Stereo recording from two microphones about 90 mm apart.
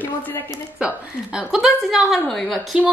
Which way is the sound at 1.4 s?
5° right (ahead or behind).